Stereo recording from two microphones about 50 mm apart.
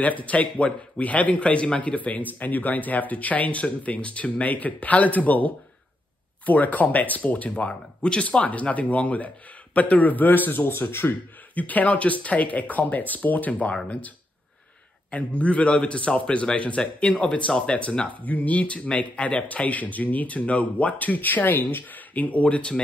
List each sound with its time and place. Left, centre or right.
0.0 s a man's voice: left
10.7 s speech: left
11.5 s a man's voice: left
15.0 s a man's voice: left